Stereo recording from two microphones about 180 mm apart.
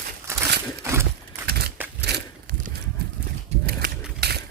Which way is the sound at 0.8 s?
15° right (ahead or behind).